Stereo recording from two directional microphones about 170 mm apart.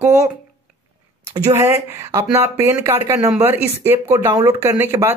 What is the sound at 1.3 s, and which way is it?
A woman's voice, 15° right (ahead or behind).